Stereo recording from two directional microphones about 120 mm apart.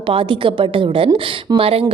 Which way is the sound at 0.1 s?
45° right (ahead or behind).